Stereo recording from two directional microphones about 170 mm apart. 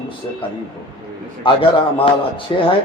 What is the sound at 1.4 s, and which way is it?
A man's voice, 30° left (ahead or behind).